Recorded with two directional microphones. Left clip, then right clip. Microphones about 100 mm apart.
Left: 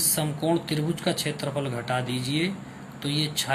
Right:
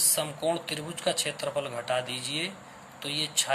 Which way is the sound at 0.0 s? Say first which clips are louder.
Left 1 dB; 30° right (ahead or behind).